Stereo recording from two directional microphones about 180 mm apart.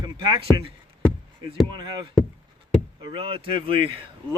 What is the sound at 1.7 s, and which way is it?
Speech, 25° right (ahead or behind).